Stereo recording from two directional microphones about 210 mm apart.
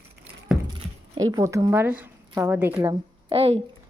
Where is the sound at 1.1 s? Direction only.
15° right (ahead or behind).